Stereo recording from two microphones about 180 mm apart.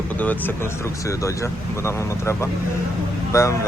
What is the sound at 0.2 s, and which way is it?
Speech, 10° left (ahead or behind).